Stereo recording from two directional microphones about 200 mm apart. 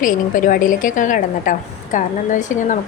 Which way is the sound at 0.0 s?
40° left (ahead or behind).